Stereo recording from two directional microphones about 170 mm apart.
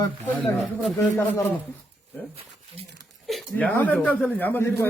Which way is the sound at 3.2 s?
5° left (ahead or behind).